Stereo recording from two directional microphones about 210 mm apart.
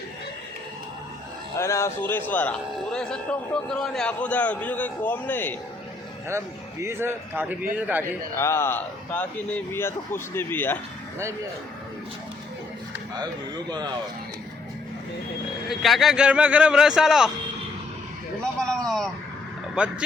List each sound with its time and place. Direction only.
1.5 s a man's voice: 15° left (ahead or behind)
6.2 s a man's voice: 15° right (ahead or behind)
8.4 s a man's voice: 10° left (ahead or behind)
13.1 s a man's voice: 20° right (ahead or behind)
15.7 s a man's voice: centre (ahead or behind)
18.6 s a man's voice: 5° left (ahead or behind)